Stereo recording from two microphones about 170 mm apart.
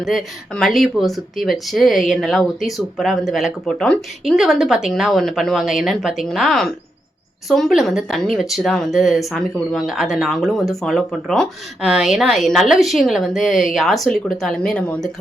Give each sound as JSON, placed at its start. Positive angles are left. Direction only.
{"t": 0.0, "sound": "speech", "side_deg": 0}